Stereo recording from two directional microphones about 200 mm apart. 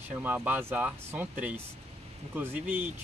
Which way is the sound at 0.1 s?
10° right (ahead or behind).